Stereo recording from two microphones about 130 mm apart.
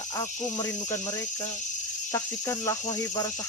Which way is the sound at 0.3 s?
70° left (ahead or behind).